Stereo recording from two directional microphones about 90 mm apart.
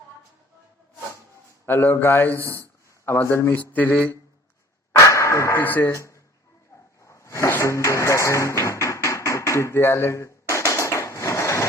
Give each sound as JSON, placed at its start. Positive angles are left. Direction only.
{"t": 1.6, "sound": "a man's voice", "side_deg": 25}
{"t": 4.9, "sound": "a sound", "side_deg": 35}
{"t": 5.9, "sound": "speech", "side_deg": 35}
{"t": 7.0, "sound": "music", "side_deg": 35}